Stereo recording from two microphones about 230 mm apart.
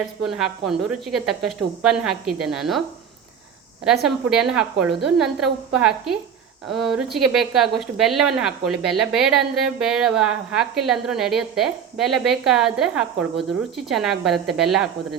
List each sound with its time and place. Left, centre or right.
0.3 s a woman's voice: centre
4.0 s a woman's voice: centre